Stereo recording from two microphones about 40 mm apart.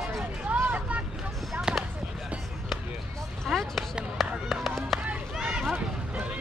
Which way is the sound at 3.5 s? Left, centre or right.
Centre.